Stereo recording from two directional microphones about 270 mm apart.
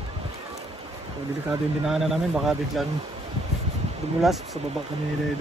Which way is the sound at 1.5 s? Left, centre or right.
Centre.